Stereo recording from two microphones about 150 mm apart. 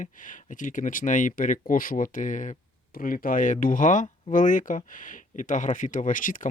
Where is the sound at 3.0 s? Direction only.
70° left (ahead or behind).